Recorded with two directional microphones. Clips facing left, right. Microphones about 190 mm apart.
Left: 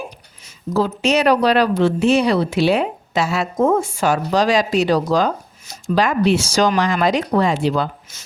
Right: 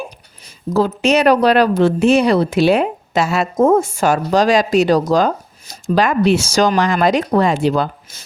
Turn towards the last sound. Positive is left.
turn(degrees=-45)  # may be behind; listen again after turning